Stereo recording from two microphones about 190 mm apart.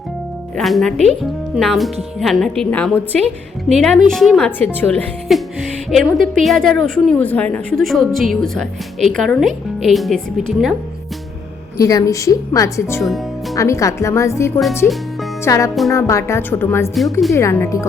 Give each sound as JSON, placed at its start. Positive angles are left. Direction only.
{"t": 0.5, "sound": "speech", "side_deg": 0}
{"t": 11.8, "sound": "a woman's voice", "side_deg": 20}
{"t": 13.0, "sound": "speech", "side_deg": 0}
{"t": 13.6, "sound": "a woman's voice", "side_deg": 15}